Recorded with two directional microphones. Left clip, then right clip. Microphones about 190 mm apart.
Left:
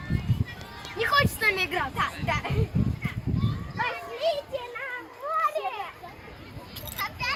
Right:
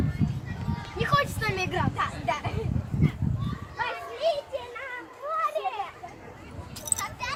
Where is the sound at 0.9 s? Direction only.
Centre (ahead or behind).